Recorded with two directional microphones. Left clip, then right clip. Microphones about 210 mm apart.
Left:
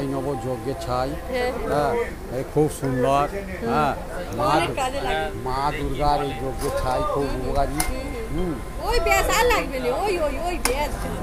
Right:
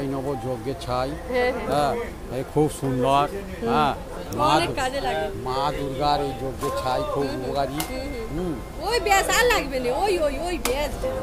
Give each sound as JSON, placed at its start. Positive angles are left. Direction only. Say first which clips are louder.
{"t": 0.3, "sound": "speech", "louder": "left 1 dB", "side_deg": 0}
{"t": 1.3, "sound": "speech", "louder": "right 3 dB", "side_deg": -25}
{"t": 1.7, "sound": "speech", "louder": "left 1 dB", "side_deg": 0}
{"t": 4.6, "sound": "speech", "louder": "left 1 dB", "side_deg": -35}
{"t": 5.5, "sound": "speech", "louder": "even", "side_deg": 5}
{"t": 8.8, "sound": "speech", "louder": "even", "side_deg": -30}